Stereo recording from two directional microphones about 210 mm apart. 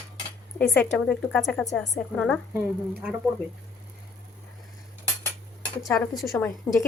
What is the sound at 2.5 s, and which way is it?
Speech, 5° right (ahead or behind).